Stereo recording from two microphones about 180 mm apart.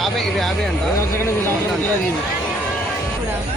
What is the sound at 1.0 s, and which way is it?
Speech, 15° left (ahead or behind).